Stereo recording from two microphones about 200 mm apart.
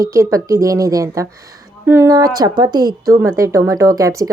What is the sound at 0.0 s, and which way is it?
A woman's voice, 15° right (ahead or behind).